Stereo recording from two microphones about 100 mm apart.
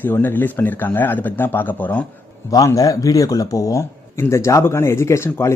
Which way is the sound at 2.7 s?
35° left (ahead or behind).